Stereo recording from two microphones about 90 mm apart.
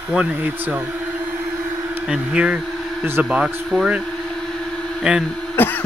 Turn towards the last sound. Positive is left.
turn(degrees=20)  # may be behind; listen again after turning